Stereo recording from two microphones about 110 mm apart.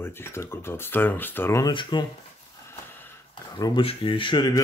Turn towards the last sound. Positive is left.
turn(degrees=45)  # may be behind; listen again after turning